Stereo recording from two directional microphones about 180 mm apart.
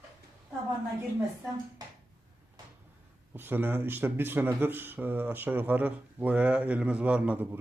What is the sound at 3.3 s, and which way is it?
Speech, 10° right (ahead or behind).